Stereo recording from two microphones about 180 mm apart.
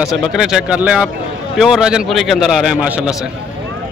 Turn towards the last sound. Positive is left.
turn(degrees=-5)  # may be behind; listen again after turning